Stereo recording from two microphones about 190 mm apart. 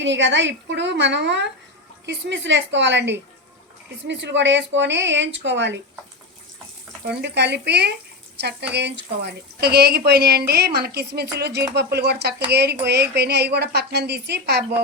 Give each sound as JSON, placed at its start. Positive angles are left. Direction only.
{"t": 0.0, "sound": "speech", "side_deg": -70}
{"t": 7.1, "sound": "a woman's voice", "side_deg": -60}